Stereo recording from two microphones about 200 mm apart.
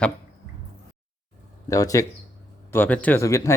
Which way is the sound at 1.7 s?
15° left (ahead or behind).